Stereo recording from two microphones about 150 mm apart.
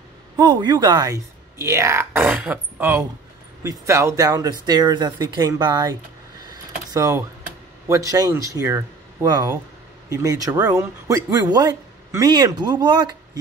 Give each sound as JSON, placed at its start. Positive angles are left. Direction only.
{"t": 0.4, "sound": "a man's voice", "side_deg": -30}
{"t": 6.5, "sound": "a sound", "side_deg": -25}
{"t": 7.9, "sound": "a man's voice", "side_deg": -25}